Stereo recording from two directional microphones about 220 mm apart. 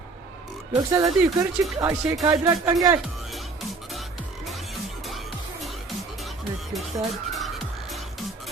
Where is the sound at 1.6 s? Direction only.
10° right (ahead or behind).